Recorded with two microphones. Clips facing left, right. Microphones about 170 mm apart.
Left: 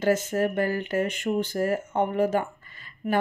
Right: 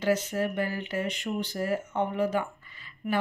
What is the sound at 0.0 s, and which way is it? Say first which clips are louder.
Speech: left 3 dB; 45° left (ahead or behind).